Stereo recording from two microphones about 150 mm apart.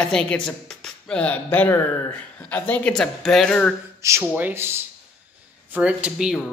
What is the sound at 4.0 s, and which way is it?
Speech, 15° right (ahead or behind).